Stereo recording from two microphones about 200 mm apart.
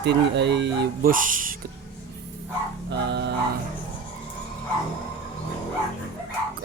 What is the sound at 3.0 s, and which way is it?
Music, 55° right (ahead or behind).